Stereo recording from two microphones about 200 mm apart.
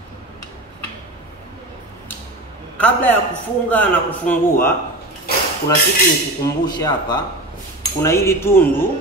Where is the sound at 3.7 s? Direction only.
10° left (ahead or behind).